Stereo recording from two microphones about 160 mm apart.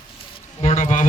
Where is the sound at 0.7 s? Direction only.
55° left (ahead or behind).